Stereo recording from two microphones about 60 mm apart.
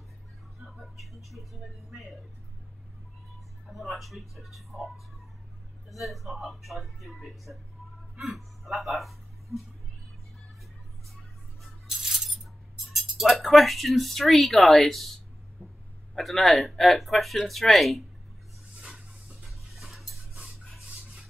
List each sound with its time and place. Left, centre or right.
0.7 s speech: centre
3.7 s speech: centre
11.6 s a sound: centre
13.2 s speech: centre
15.6 s dog: centre
16.2 s speech: centre
18.8 s dishes: centre